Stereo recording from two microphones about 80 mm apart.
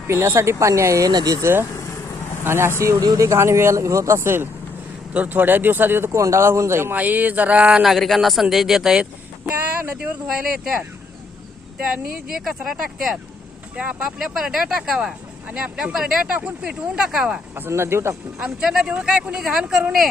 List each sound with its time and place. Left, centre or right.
0.1 s speech: right
3.0 s speech: right
5.1 s speech: right
6.9 s speech: centre
7.9 s speech: centre
9.8 s speech: centre
11.8 s speech: centre
17.5 s speech: right
18.3 s speech: centre